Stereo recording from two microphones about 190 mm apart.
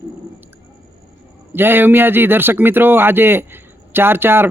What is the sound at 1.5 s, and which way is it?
Speech, 10° right (ahead or behind).